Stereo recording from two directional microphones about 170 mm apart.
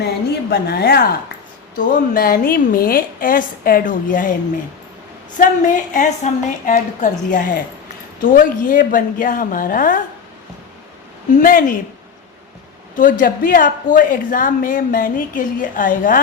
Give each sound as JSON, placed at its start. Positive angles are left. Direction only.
{"t": 0.5, "sound": "a woman's voice", "side_deg": 65}
{"t": 1.7, "sound": "a woman's voice", "side_deg": 50}
{"t": 5.4, "sound": "a woman's voice", "side_deg": 50}
{"t": 11.3, "sound": "a woman's voice", "side_deg": 55}
{"t": 13.0, "sound": "a woman's voice", "side_deg": 55}